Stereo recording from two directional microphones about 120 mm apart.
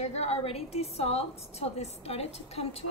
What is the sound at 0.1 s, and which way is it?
A woman's voice, 60° left (ahead or behind).